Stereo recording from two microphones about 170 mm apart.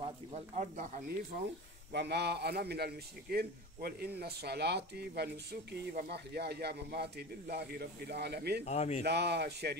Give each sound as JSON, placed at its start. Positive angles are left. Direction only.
{"t": 0.0, "sound": "speech", "side_deg": -40}
{"t": 1.9, "sound": "speech", "side_deg": -80}
{"t": 8.6, "sound": "speech", "side_deg": 40}
{"t": 9.0, "sound": "speech", "side_deg": -80}